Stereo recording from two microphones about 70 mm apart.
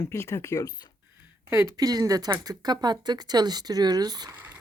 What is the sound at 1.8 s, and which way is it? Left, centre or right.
Speech, right.